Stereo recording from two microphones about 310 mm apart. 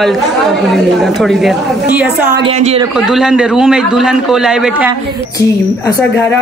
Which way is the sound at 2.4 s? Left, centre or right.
Centre.